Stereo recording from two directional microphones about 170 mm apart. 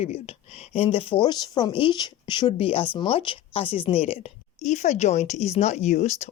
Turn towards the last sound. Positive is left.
turn(degrees=40)  # may be behind; listen again after turning